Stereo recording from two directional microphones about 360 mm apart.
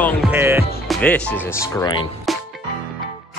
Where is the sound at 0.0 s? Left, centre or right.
Centre.